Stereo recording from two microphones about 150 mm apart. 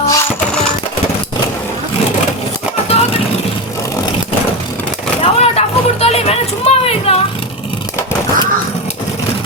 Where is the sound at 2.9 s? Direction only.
40° left (ahead or behind).